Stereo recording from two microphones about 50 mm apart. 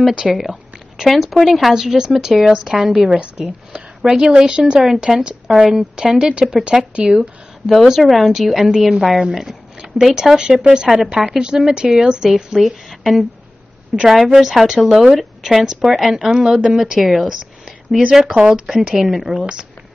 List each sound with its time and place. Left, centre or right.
0.2 s a woman's voice: centre
7.1 s a woman's voice: centre
18.2 s speech: centre
18.8 s a woman's voice: centre